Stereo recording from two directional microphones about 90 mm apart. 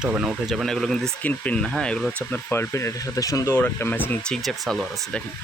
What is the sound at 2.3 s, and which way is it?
Speech, 20° left (ahead or behind).